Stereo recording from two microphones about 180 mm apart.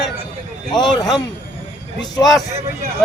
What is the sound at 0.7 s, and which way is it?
Speech, 25° left (ahead or behind).